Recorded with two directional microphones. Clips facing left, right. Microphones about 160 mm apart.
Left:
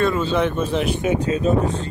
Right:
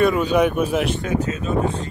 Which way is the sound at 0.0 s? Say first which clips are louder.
Right 2 dB; 15° right (ahead or behind).